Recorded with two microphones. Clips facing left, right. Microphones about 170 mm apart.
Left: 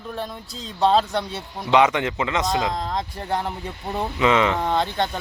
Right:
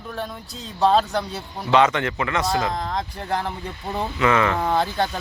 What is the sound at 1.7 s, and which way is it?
Speech, 15° left (ahead or behind).